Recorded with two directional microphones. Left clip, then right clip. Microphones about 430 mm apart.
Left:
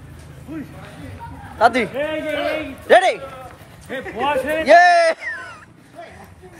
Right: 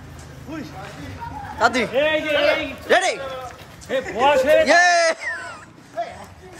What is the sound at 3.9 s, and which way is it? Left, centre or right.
Speech, right.